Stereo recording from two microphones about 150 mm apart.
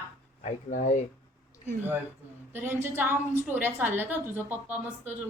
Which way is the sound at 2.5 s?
15° right (ahead or behind).